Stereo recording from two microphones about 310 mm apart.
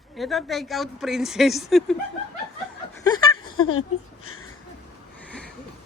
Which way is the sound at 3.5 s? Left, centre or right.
Left.